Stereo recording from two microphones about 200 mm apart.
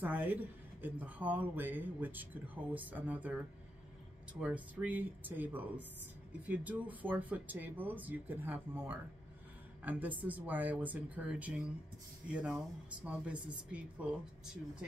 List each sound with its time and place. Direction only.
0.0 s speech: 10° right (ahead or behind)